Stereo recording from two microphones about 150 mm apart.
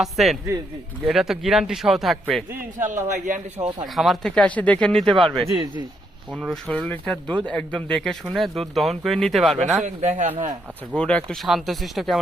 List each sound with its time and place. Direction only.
0.0 s speech: centre (ahead or behind)
2.8 s speech: 60° right (ahead or behind)
3.9 s speech: centre (ahead or behind)
9.6 s a man's voice: 50° right (ahead or behind)
10.9 s speech: 5° left (ahead or behind)